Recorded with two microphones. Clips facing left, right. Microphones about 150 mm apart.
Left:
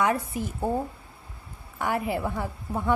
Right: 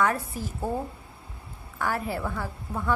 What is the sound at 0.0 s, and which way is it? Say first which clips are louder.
Speech: left 1 dB; 20° left (ahead or behind).